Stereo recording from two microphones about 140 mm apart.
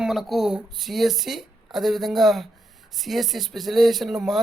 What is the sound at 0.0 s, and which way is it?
A woman's voice, centre (ahead or behind).